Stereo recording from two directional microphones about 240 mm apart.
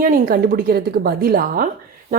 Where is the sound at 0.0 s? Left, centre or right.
Right.